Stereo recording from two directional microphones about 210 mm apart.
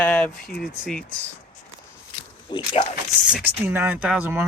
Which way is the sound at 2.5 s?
20° left (ahead or behind).